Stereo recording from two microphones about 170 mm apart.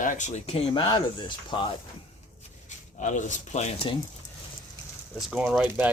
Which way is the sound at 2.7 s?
45° left (ahead or behind).